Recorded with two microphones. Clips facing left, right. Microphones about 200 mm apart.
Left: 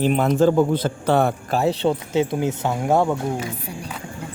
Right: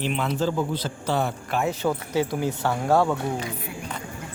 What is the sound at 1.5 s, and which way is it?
Speech, 35° left (ahead or behind).